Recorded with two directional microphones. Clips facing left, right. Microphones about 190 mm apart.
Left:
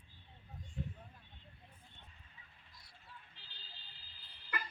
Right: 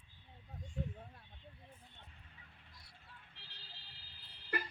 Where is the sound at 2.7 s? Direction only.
60° right (ahead or behind).